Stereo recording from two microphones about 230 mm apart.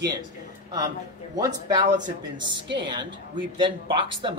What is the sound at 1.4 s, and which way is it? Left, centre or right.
Speech, centre.